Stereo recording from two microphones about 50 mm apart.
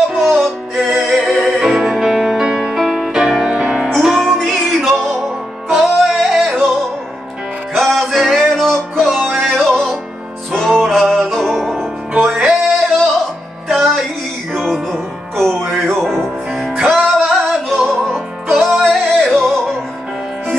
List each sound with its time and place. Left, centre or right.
0.1 s music: centre
3.9 s music: centre
5.7 s music: centre
7.7 s music: centre
13.7 s music: centre